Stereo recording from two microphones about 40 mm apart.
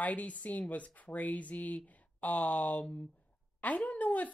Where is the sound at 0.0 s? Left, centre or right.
Left.